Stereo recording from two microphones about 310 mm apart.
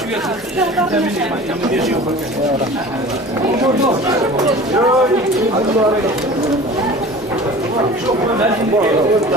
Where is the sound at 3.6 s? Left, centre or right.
Centre.